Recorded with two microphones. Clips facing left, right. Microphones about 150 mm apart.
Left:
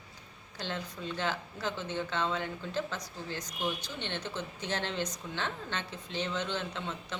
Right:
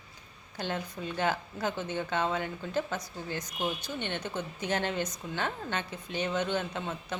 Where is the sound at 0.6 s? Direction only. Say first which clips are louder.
Right 3 dB; 55° right (ahead or behind).